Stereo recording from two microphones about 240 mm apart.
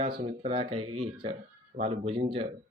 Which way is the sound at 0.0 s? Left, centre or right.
Right.